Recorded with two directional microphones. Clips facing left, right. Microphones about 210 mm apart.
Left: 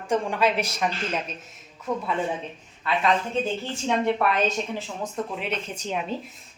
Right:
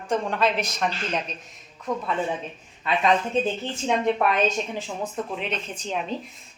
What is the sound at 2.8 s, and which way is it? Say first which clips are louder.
Speech: right 2 dB; 20° right (ahead or behind).